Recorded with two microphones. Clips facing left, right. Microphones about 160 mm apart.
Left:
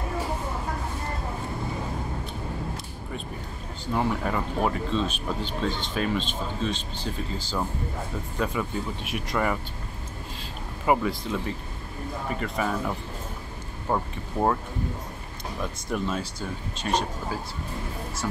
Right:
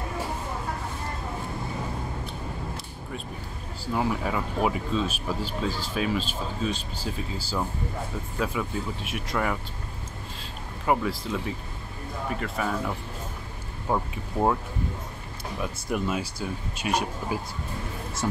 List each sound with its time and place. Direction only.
3.8 s speech: 5° right (ahead or behind)
10.9 s speech: centre (ahead or behind)
15.6 s speech: 10° right (ahead or behind)
18.2 s speech: 25° right (ahead or behind)